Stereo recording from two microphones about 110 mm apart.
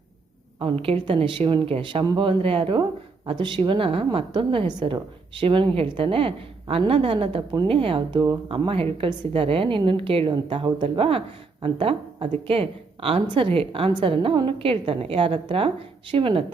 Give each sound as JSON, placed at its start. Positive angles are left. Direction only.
{"t": 0.6, "sound": "a woman's voice", "side_deg": -55}
{"t": 10.3, "sound": "a woman's voice", "side_deg": -45}